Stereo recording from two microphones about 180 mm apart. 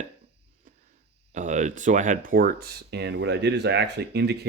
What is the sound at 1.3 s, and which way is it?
Speech, 40° right (ahead or behind).